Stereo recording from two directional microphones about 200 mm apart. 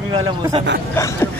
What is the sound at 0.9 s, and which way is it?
Chuckle, 10° left (ahead or behind).